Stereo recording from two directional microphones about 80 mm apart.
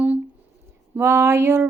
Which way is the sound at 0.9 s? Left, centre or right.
Right.